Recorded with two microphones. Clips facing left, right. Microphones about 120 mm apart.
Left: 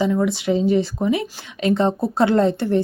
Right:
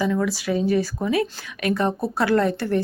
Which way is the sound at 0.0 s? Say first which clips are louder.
Left 3 dB; 20° left (ahead or behind).